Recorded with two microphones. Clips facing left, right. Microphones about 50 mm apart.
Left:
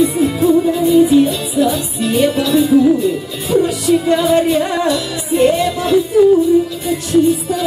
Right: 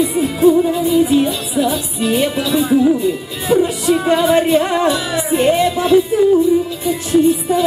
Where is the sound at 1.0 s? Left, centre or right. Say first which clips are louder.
Left 3 dB; centre.